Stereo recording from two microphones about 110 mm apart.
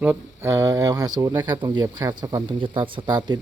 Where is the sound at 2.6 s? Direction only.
50° right (ahead or behind).